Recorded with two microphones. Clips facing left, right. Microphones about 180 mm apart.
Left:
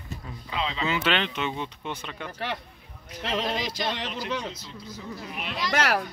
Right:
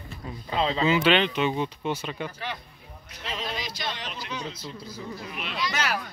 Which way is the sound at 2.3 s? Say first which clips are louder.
Left 3 dB; 65° left (ahead or behind).